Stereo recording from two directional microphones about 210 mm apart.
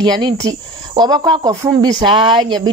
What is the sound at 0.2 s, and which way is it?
Speech, 20° right (ahead or behind).